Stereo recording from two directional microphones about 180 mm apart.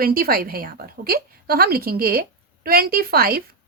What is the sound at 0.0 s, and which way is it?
A woman's voice, 55° right (ahead or behind).